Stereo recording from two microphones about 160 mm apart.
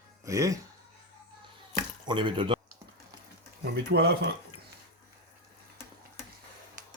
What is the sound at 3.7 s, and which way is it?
Speech, 80° right.